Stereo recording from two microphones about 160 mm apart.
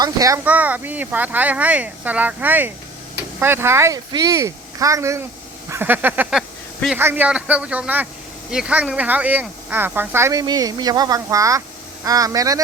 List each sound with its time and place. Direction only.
0.0 s speech: 20° right (ahead or behind)
0.4 s speech: 10° right (ahead or behind)